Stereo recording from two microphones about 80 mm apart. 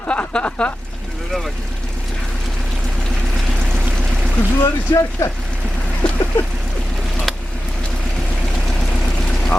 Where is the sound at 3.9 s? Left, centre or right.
Centre.